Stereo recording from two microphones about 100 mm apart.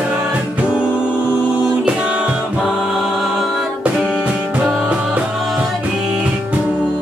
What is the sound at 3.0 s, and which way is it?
Music, centre (ahead or behind).